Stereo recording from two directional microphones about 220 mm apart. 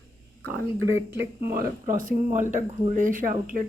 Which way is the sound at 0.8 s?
60° right (ahead or behind).